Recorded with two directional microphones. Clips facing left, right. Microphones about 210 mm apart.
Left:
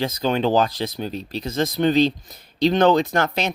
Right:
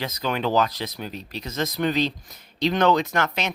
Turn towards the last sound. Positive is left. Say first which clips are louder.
# left 4 dB
turn(degrees=35)  # may be behind; listen again after turning